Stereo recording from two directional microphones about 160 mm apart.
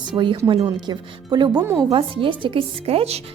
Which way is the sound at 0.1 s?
30° right (ahead or behind).